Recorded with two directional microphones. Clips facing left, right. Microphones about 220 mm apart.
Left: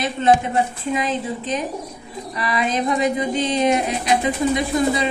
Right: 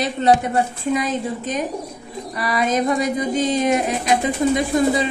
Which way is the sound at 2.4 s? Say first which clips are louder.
Right 2 dB; 45° right (ahead or behind).